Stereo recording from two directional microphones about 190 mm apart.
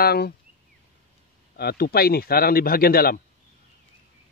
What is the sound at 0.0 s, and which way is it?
Speech, 55° left (ahead or behind).